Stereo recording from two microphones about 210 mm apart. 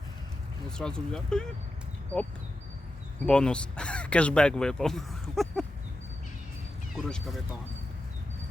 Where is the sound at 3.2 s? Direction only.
5° left (ahead or behind).